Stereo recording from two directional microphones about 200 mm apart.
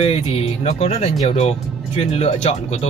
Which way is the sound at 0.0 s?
30° left (ahead or behind).